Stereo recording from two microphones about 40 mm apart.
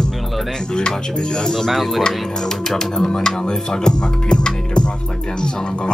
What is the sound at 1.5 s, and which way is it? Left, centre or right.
Speech, centre.